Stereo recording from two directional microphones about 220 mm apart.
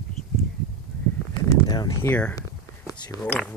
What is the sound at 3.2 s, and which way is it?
Speech, 5° left (ahead or behind).